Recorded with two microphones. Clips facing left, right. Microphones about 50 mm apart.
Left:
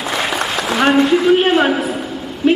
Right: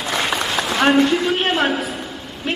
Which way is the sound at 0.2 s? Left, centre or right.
Centre.